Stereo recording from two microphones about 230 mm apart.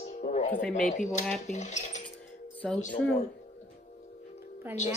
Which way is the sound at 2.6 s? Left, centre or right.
Centre.